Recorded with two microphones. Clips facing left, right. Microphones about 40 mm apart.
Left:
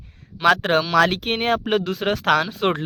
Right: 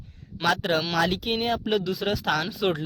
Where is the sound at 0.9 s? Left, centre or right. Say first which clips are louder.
Left 6 dB; left.